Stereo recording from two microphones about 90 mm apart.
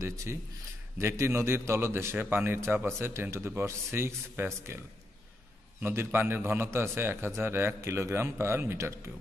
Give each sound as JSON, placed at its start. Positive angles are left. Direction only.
{"t": 0.0, "sound": "a man's voice", "side_deg": -35}
{"t": 5.8, "sound": "a man's voice", "side_deg": -25}